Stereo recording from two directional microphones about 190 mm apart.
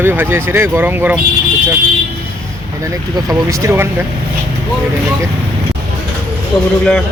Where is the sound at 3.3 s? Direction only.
15° right (ahead or behind).